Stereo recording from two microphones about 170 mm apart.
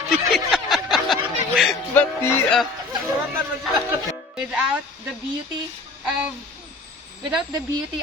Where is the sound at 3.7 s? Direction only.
Centre (ahead or behind).